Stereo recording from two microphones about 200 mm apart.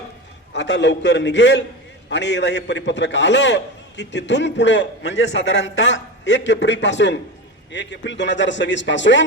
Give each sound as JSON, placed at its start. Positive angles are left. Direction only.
{"t": 0.5, "sound": "a man's voice", "side_deg": 60}